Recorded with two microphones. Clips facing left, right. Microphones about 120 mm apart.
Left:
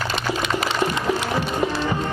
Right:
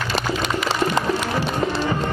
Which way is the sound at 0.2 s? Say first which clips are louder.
Right 3 dB; 40° right (ahead or behind).